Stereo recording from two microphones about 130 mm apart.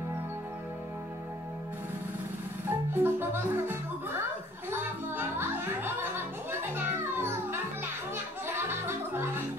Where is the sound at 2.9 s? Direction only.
15° right (ahead or behind).